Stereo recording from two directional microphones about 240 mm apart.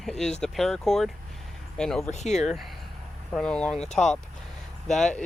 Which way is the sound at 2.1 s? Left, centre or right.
Left.